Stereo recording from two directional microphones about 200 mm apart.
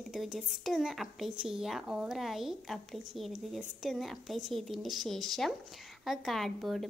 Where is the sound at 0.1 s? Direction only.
Centre (ahead or behind).